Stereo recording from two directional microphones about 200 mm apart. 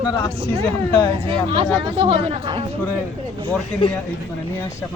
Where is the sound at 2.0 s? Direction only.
25° right (ahead or behind).